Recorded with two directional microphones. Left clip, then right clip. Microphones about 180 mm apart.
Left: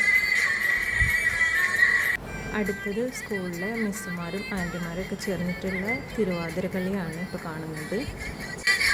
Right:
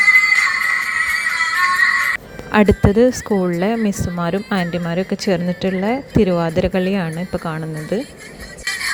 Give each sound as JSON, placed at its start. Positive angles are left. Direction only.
{"t": 0.2, "sound": "music", "side_deg": -45}
{"t": 3.8, "sound": "speech", "side_deg": -45}
{"t": 8.6, "sound": "music", "side_deg": -25}